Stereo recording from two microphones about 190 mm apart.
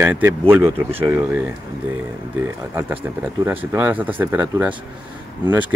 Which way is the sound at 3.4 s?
10° right (ahead or behind).